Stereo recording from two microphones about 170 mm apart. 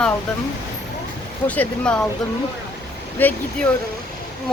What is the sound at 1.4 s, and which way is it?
Speech, 10° left (ahead or behind).